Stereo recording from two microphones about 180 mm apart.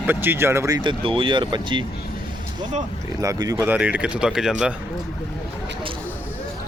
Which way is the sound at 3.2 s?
20° right (ahead or behind).